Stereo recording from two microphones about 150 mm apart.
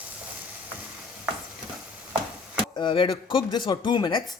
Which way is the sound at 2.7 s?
35° left (ahead or behind).